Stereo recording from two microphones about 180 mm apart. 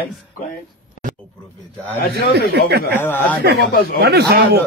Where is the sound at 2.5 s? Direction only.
65° right (ahead or behind).